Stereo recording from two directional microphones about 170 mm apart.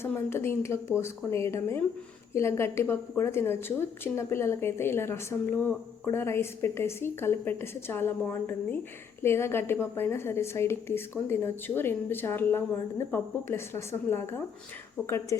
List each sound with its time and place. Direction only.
0.0 s a woman's voice: 15° left (ahead or behind)